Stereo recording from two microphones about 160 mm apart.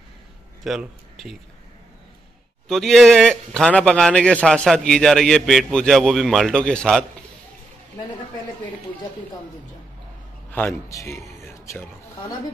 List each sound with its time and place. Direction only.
0.7 s a man's voice: centre (ahead or behind)
2.7 s a man's voice: centre (ahead or behind)
10.5 s speech: 15° left (ahead or behind)